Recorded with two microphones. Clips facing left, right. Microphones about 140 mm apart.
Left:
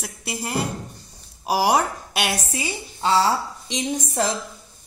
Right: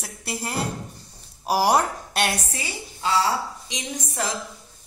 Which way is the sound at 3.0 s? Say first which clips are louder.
Left 3 dB; 30° left (ahead or behind).